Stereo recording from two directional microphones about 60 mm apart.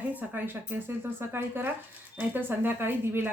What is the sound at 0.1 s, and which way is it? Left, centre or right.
Speech, right.